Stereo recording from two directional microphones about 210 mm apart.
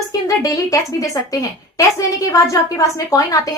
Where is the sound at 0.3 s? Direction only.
15° left (ahead or behind).